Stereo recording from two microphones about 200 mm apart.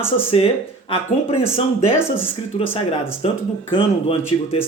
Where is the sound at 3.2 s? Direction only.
30° left (ahead or behind).